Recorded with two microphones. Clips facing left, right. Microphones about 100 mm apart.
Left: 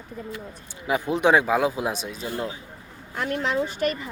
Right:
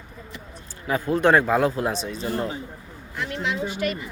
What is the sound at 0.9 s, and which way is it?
A man's voice, 15° left (ahead or behind).